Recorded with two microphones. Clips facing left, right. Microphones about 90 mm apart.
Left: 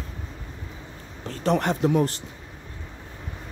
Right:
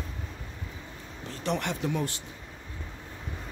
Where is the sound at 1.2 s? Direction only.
40° left (ahead or behind).